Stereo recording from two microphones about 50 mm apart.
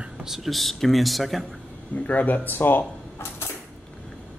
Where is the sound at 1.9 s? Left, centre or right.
Left.